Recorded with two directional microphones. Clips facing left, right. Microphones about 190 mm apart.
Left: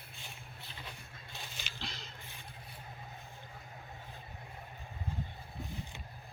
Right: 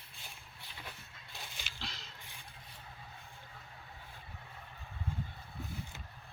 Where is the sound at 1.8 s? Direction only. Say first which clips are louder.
Left 2 dB; centre (ahead or behind).